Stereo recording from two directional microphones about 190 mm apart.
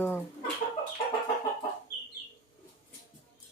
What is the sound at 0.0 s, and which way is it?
Chicken, 10° left (ahead or behind).